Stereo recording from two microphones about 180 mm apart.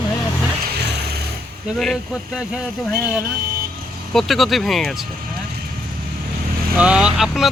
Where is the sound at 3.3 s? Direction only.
55° right (ahead or behind).